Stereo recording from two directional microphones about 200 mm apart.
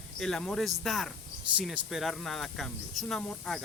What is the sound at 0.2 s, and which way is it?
Speech, 5° left (ahead or behind).